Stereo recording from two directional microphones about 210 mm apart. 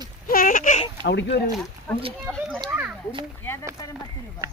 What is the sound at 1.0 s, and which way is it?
Speech, 55° left (ahead or behind).